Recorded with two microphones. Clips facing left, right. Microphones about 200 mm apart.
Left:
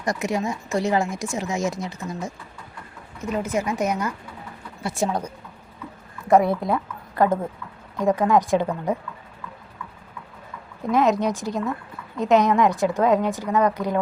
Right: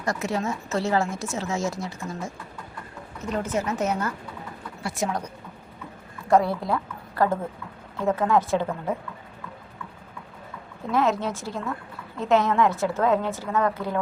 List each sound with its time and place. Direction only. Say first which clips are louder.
0.0 s speech: left 2 dB; 15° left (ahead or behind)
4.8 s speech: left 3 dB; 25° left (ahead or behind)
6.2 s a woman's voice: left 3 dB; 20° left (ahead or behind)
10.9 s speech: left 4 dB; 15° left (ahead or behind)